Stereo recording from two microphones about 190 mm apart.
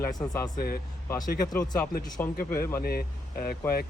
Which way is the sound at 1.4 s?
20° left (ahead or behind).